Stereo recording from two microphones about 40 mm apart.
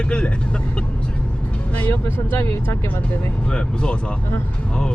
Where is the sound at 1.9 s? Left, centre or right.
Left.